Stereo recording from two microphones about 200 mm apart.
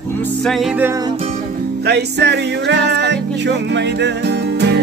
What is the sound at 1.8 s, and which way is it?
Music, 55° right (ahead or behind).